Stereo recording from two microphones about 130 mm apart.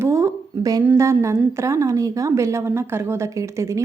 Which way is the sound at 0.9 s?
20° right (ahead or behind).